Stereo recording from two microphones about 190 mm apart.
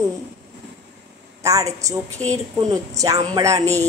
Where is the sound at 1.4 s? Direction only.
15° right (ahead or behind).